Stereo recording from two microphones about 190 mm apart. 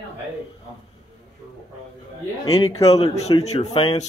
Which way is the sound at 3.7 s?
20° left (ahead or behind).